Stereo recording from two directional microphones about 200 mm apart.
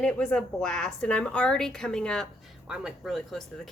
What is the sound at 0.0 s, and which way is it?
Speech, 5° left (ahead or behind).